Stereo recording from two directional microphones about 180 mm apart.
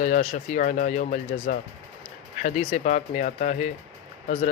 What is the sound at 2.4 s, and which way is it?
A man's voice, 40° left (ahead or behind).